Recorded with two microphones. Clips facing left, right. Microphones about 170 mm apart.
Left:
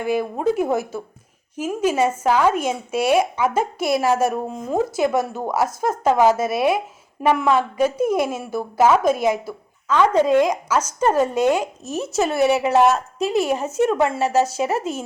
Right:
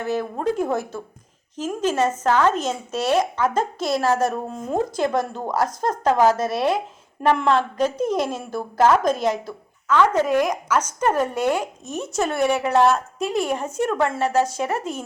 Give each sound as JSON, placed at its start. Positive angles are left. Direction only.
{"t": 0.0, "sound": "speech", "side_deg": 10}
{"t": 11.9, "sound": "speech", "side_deg": 5}
{"t": 12.6, "sound": "speech", "side_deg": 20}
{"t": 13.1, "sound": "speech", "side_deg": 5}
{"t": 13.7, "sound": "speech", "side_deg": 20}
{"t": 14.1, "sound": "speech", "side_deg": 5}